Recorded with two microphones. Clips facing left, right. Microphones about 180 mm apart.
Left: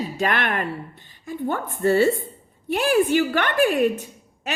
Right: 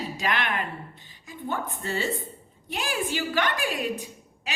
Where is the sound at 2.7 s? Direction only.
60° left (ahead or behind).